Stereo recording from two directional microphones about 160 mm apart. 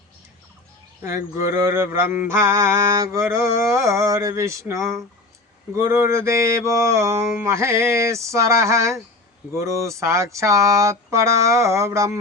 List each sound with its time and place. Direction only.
1.0 s mantra: 20° right (ahead or behind)